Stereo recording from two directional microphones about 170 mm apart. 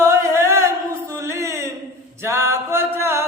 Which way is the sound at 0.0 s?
15° right (ahead or behind).